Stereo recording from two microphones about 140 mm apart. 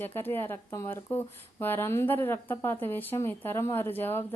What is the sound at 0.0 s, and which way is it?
Speech, 15° left (ahead or behind).